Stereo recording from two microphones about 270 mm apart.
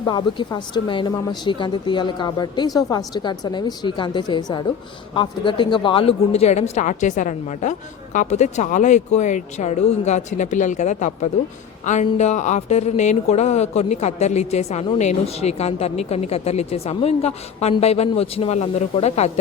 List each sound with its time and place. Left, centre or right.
0.0 s a woman's voice: centre